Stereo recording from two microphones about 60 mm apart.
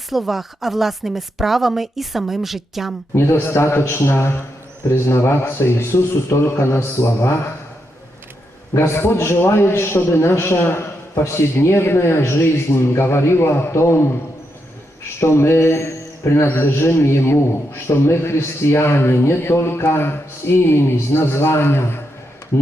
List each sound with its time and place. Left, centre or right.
0.1 s speech: centre
3.2 s a man's voice: left
8.7 s a man's voice: left
15.2 s a man's voice: left